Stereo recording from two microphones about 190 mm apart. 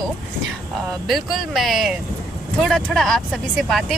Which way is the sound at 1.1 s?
Centre (ahead or behind).